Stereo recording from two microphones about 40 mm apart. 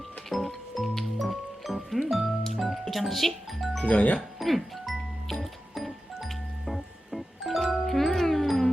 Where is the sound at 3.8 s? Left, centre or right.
Left.